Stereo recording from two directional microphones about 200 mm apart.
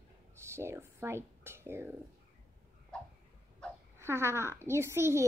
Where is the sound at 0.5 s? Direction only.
15° right (ahead or behind).